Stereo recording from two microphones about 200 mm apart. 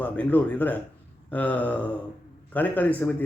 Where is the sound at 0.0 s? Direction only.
10° left (ahead or behind).